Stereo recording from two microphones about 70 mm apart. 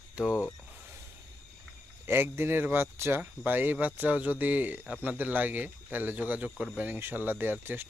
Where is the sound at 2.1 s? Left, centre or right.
Right.